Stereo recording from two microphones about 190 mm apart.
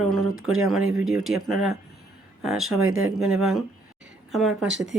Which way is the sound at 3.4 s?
Centre (ahead or behind).